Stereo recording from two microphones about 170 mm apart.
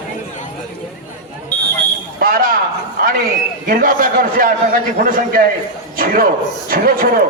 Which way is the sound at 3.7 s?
55° right (ahead or behind).